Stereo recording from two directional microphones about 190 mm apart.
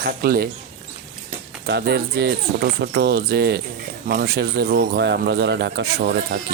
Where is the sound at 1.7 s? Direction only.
60° right (ahead or behind).